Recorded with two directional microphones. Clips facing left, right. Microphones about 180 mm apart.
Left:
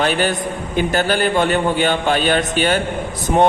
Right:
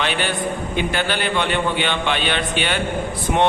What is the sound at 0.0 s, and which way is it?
A man's voice, 45° left (ahead or behind).